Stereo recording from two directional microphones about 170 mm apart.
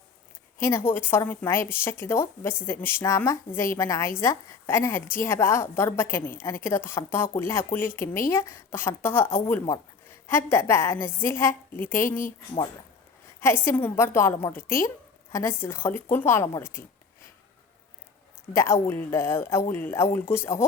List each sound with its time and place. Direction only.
0.6 s a woman's voice: 15° left (ahead or behind)
13.7 s a woman's voice: 10° left (ahead or behind)
18.5 s a woman's voice: 15° left (ahead or behind)